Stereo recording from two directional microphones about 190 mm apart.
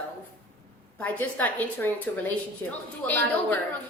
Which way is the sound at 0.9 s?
10° left (ahead or behind).